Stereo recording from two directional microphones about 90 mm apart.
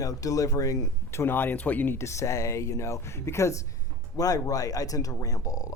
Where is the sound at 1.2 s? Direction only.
25° left (ahead or behind).